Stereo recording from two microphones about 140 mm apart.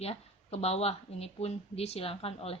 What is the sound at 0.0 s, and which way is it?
Speech, 45° left (ahead or behind).